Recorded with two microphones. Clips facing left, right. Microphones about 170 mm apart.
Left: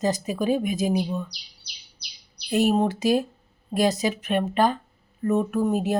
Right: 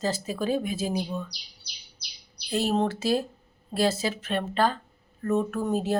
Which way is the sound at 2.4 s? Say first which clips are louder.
Left 4 dB; 15° left (ahead or behind).